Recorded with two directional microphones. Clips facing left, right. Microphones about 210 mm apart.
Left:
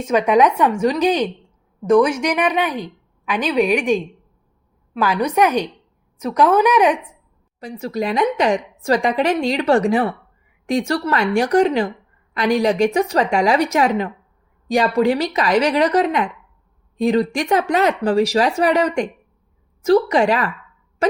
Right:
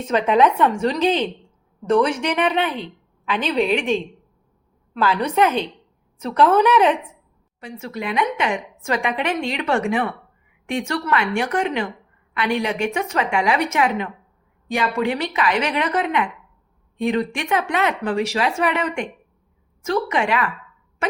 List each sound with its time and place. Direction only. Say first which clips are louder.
0.1 s a woman's voice: left 2 dB; 15° left (ahead or behind)
7.6 s a woman's voice: left 6 dB; 35° left (ahead or behind)